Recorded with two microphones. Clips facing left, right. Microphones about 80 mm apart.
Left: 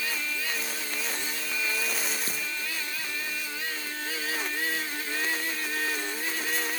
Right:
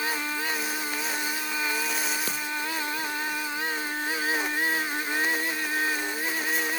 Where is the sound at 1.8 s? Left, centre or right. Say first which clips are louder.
Right 3 dB; centre.